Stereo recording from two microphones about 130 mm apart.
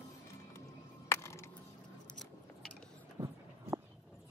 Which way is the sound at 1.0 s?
20° left (ahead or behind).